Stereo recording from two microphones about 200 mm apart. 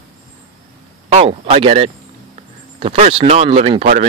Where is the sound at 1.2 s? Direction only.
25° right (ahead or behind).